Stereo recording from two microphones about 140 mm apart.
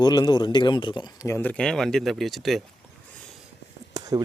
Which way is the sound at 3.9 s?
25° right (ahead or behind).